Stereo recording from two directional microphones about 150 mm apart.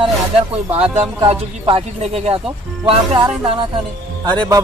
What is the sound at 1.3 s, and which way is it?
Speech, 40° right (ahead or behind).